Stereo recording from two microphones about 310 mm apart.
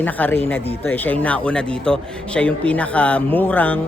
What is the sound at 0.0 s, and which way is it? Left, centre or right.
Speech, centre.